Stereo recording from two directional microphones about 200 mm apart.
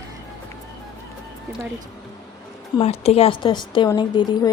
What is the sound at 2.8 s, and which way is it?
A woman's voice, 30° left (ahead or behind).